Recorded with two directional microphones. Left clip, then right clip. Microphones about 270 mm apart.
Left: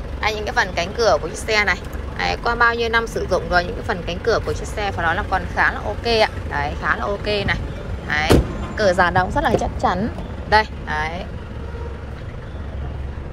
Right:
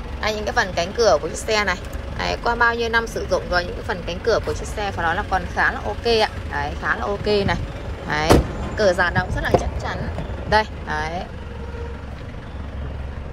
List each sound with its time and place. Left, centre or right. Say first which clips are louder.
0.2 s speech: left 1 dB; centre
10.5 s speech: left 2 dB; centre